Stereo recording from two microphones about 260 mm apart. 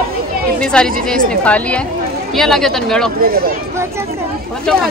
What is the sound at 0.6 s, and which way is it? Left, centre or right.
A woman's voice, centre.